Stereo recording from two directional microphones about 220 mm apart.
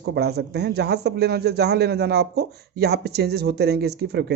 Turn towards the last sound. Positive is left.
turn(degrees=-50)  # may be behind; listen again after turning